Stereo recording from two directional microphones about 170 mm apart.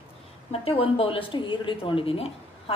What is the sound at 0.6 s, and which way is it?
Speech, 35° left (ahead or behind).